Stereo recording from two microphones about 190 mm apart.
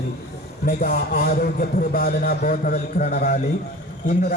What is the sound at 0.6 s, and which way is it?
A man's voice, 50° left (ahead or behind).